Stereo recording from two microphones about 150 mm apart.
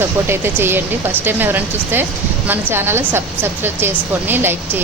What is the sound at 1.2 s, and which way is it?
A woman's voice, 15° right (ahead or behind).